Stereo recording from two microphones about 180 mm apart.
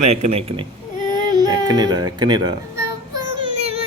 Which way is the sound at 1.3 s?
20° right (ahead or behind).